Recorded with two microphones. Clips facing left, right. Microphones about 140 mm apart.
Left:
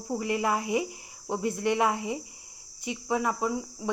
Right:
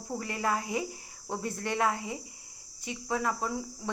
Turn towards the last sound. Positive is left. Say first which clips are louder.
# left 4 dB
turn(degrees=5)  # may be behind; listen again after turning